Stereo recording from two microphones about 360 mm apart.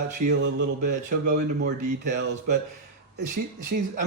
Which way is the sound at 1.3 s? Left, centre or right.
Right.